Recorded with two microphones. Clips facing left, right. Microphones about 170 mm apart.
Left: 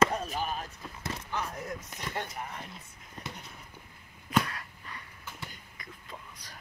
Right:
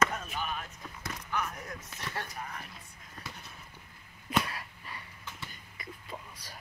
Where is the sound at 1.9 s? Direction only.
15° left (ahead or behind).